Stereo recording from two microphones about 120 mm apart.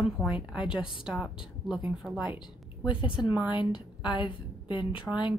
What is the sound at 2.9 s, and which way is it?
A woman's voice, 45° left (ahead or behind).